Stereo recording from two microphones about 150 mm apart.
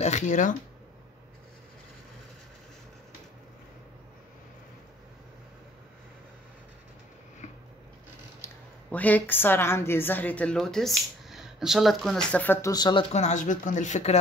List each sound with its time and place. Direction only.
0.0 s speech: 55° left (ahead or behind)
8.4 s a sound: 15° left (ahead or behind)
8.9 s a woman's voice: 10° left (ahead or behind)
12.6 s speech: 30° left (ahead or behind)
13.1 s speech: 50° left (ahead or behind)